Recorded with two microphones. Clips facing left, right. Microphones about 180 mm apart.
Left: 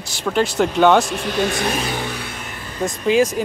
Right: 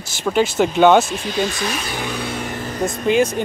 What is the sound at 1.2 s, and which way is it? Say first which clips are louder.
Speech: left 1 dB; 60° left (ahead or behind).